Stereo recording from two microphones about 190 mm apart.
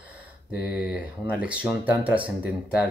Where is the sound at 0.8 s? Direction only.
5° right (ahead or behind).